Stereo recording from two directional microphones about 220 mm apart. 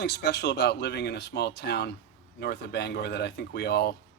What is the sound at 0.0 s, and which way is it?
Speech, 50° left (ahead or behind).